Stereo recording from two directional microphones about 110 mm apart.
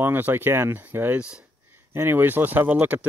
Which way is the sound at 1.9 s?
20° right (ahead or behind).